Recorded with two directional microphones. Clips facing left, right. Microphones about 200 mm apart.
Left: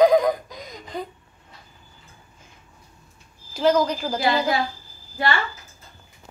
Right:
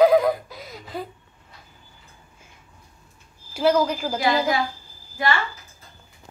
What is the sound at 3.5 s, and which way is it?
A woman's voice, 10° right (ahead or behind).